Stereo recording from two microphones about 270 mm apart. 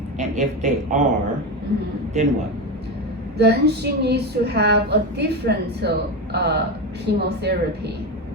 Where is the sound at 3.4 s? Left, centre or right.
Right.